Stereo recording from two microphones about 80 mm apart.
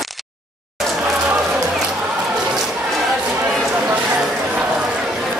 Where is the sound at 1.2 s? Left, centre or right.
Centre.